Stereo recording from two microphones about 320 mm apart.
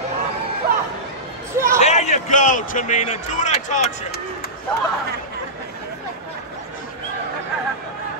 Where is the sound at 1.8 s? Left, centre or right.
Left.